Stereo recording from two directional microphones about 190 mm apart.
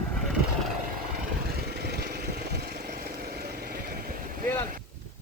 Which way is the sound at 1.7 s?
60° right (ahead or behind).